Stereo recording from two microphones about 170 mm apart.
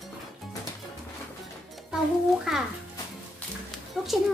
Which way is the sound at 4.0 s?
Centre (ahead or behind).